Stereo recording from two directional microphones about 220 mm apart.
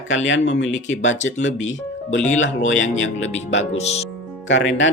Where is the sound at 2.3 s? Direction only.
60° left (ahead or behind).